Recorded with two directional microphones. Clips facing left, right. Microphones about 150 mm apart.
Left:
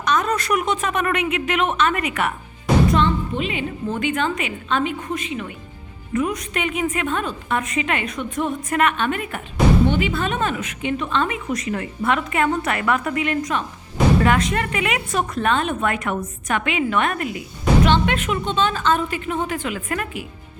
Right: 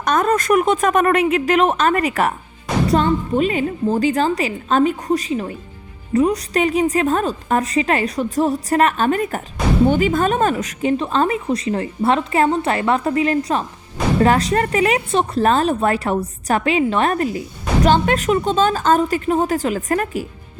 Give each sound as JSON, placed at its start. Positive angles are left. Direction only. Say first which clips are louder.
{"t": 0.0, "sound": "a woman's voice", "louder": "right 4 dB", "side_deg": -50}